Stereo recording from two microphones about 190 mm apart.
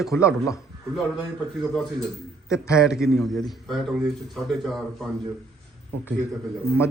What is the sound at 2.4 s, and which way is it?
Speech, 15° left (ahead or behind).